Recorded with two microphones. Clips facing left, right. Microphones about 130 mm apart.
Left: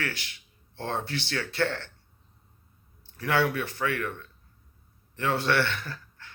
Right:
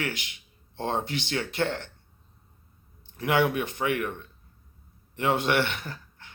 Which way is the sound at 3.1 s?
20° right (ahead or behind).